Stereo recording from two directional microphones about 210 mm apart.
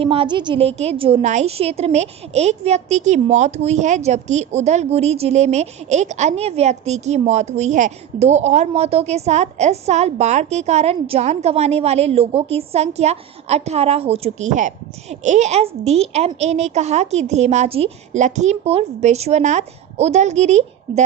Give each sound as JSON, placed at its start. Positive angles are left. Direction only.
{"t": 0.0, "sound": "a woman's voice", "side_deg": -25}